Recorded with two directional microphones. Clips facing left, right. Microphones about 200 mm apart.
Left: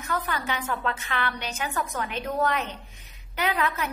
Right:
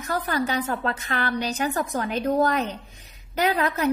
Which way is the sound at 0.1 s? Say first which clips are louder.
Right 5 dB; 35° right (ahead or behind).